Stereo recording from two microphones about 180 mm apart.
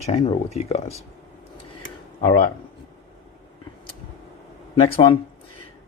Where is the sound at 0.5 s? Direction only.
35° left (ahead or behind).